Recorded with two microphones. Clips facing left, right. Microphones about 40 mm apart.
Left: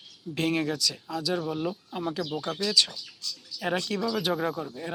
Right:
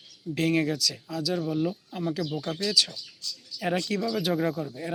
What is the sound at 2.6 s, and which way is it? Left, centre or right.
Speech, centre.